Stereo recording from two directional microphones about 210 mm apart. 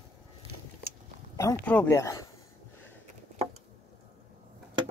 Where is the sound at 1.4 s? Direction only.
10° left (ahead or behind).